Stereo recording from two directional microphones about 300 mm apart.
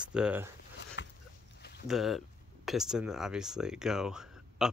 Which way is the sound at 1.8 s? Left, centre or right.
Centre.